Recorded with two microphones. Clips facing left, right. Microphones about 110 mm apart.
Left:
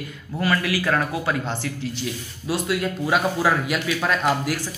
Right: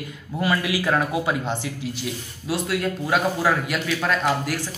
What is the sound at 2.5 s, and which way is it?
Speech, centre (ahead or behind).